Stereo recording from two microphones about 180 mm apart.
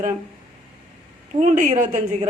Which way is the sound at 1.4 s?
45° right (ahead or behind).